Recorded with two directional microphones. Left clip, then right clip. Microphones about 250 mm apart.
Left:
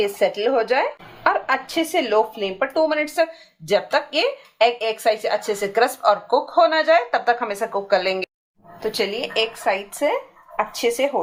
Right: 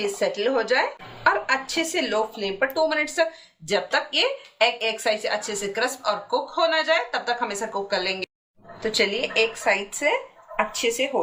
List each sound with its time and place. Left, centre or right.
0.0 s a woman's voice: centre